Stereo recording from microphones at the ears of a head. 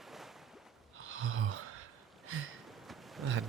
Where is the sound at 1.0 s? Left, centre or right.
Right.